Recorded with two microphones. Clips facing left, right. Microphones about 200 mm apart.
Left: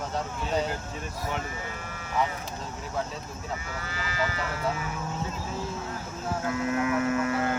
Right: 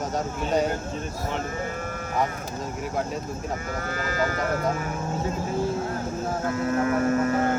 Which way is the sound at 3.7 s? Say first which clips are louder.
Right 5 dB; 50° right (ahead or behind).